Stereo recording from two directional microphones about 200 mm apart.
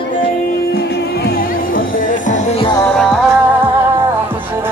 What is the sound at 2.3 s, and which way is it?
Music, 30° left (ahead or behind).